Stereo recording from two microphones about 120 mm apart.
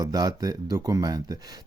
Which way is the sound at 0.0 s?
30° right (ahead or behind).